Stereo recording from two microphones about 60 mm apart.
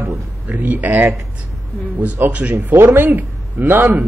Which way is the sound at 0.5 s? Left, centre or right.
Right.